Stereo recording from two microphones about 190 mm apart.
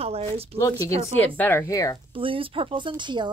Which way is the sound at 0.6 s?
15° left (ahead or behind).